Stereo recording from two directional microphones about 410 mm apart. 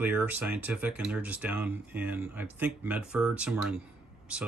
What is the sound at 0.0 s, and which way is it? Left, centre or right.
Speech, centre.